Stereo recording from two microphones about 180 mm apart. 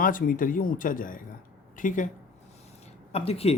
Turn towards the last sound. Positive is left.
turn(degrees=35)  # may be behind; listen again after turning